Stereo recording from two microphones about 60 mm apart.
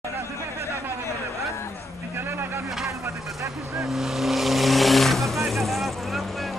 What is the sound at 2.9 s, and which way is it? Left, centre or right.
Vehicle, right.